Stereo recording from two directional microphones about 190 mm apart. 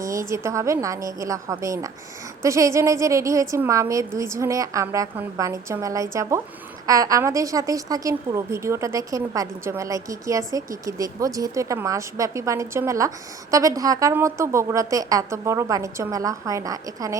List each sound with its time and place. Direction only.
0.0 s a woman's voice: 15° right (ahead or behind)